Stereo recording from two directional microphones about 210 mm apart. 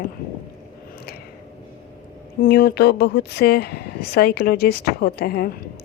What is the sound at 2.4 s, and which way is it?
A woman's voice, 45° left (ahead or behind).